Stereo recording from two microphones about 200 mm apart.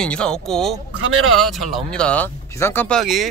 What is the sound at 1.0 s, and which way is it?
Speech, 90° right.